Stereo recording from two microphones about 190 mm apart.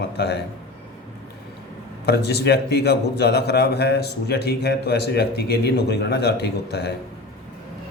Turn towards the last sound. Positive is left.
turn(degrees=60)  # may be behind; listen again after turning